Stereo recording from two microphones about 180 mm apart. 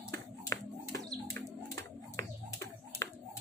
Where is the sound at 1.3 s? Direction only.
15° left (ahead or behind).